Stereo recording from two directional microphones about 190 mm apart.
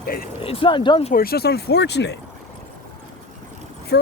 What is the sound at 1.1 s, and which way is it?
Speech, 50° left (ahead or behind).